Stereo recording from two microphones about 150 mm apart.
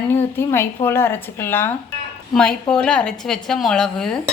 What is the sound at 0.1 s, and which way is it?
A woman's voice, 15° left (ahead or behind).